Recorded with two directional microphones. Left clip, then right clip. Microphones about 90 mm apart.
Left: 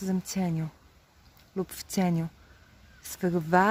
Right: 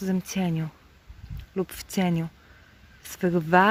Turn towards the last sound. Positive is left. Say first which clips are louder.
# right 4 dB
turn(degrees=10)  # may be behind; listen again after turning